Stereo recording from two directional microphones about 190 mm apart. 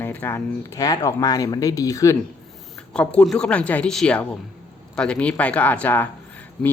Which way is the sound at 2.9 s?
5° left (ahead or behind).